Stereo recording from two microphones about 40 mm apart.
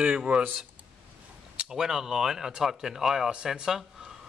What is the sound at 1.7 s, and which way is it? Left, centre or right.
Speech, centre.